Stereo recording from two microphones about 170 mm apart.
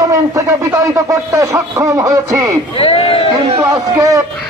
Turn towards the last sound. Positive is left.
turn(degrees=-15)  # may be behind; listen again after turning